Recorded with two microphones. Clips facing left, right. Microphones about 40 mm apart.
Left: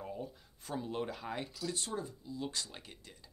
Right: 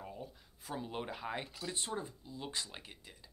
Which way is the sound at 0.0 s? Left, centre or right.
Centre.